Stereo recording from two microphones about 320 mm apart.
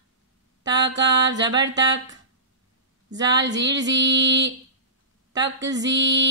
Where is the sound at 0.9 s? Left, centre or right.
Right.